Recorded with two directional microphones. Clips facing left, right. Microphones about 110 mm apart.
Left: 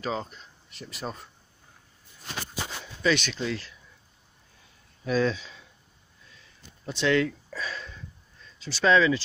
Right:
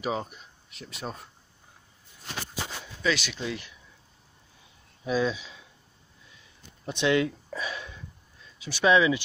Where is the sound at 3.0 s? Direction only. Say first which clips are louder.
Left 3 dB; 5° right (ahead or behind).